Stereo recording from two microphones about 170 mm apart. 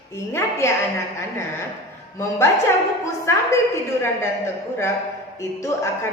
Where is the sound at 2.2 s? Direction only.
15° left (ahead or behind).